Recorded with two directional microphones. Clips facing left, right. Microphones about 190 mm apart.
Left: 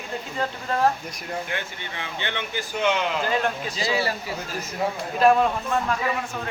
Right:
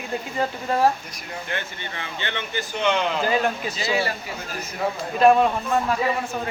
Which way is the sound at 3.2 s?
5° right (ahead or behind).